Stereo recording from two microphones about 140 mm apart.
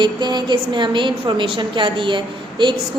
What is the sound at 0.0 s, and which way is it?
A woman's voice, 30° right (ahead or behind).